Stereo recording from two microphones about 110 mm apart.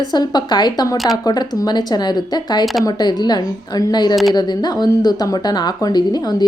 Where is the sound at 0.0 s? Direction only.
40° left (ahead or behind).